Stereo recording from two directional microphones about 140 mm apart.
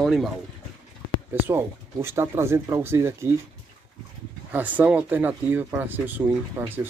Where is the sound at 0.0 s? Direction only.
Centre (ahead or behind).